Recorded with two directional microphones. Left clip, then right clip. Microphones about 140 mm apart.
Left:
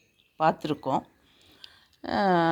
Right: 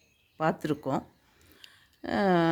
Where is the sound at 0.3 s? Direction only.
25° right (ahead or behind).